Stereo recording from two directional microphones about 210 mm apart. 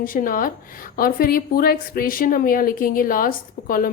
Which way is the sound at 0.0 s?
40° left (ahead or behind).